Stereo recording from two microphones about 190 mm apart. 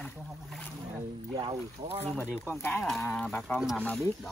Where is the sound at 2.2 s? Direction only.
10° left (ahead or behind).